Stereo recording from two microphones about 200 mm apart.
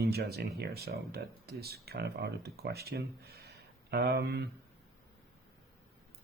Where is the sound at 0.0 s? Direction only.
50° right (ahead or behind).